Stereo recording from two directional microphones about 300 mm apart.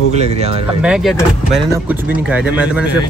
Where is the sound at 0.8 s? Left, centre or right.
Centre.